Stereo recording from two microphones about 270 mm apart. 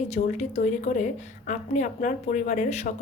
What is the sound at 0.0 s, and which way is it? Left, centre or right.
Speech, left.